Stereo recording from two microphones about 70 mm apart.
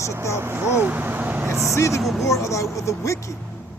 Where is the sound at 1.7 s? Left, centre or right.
Left.